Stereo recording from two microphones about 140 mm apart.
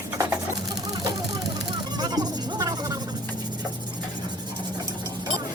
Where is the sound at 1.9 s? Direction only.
30° right (ahead or behind).